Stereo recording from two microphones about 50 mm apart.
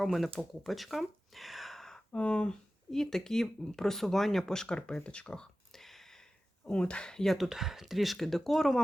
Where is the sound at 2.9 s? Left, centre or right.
Centre.